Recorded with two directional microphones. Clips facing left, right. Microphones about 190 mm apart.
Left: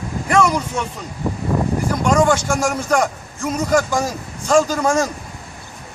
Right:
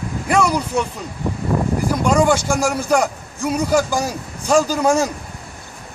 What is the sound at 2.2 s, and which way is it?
Speech, 10° right (ahead or behind).